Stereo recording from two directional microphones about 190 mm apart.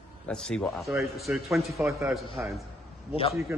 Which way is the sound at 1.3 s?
10° right (ahead or behind).